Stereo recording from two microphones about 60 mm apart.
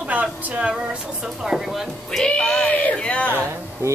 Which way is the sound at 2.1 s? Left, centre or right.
Centre.